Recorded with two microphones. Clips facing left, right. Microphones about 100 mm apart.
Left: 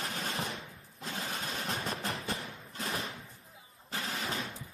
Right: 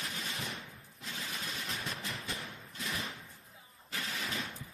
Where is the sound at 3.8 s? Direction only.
35° left (ahead or behind).